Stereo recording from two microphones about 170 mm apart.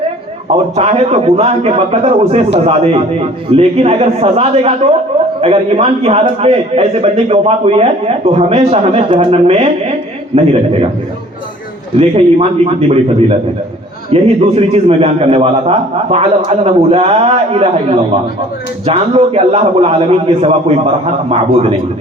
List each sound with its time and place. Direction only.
0.4 s a man's voice: 40° right (ahead or behind)
11.9 s a man's voice: 35° right (ahead or behind)